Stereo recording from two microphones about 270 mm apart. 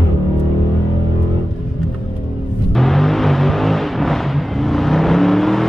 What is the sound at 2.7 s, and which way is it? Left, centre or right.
Vehicle, centre.